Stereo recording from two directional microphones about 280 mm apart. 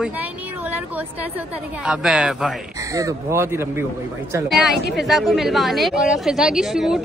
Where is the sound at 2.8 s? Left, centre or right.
Centre.